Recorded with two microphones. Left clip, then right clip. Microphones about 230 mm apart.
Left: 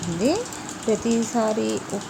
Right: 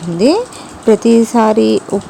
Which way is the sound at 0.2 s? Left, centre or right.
Right.